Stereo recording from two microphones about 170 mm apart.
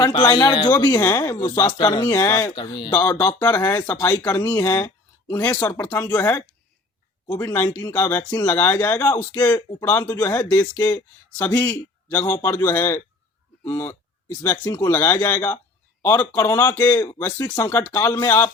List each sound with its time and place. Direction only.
0.0 s speech: 25° left (ahead or behind)
2.6 s speech: 25° left (ahead or behind)
2.9 s speech: 15° left (ahead or behind)